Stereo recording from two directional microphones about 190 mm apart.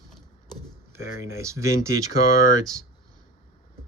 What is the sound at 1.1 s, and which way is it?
Speech, 90° right.